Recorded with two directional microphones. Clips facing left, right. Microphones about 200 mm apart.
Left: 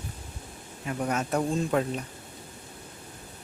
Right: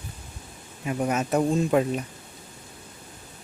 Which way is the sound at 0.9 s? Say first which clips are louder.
Right 4 dB; 15° right (ahead or behind).